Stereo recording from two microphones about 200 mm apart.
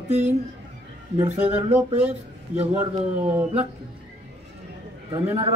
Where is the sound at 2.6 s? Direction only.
30° right (ahead or behind).